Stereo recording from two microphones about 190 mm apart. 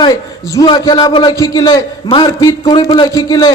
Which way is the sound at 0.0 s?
20° left (ahead or behind).